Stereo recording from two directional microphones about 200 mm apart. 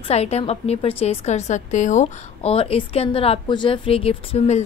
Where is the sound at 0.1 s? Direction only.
30° left (ahead or behind).